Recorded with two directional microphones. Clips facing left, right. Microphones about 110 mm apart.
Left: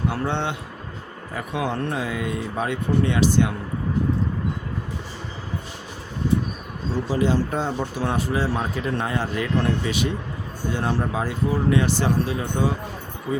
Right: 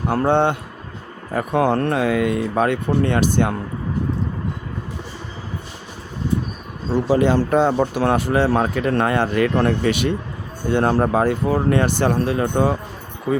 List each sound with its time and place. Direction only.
0.1 s speech: 45° right (ahead or behind)
7.1 s speech: 65° right (ahead or behind)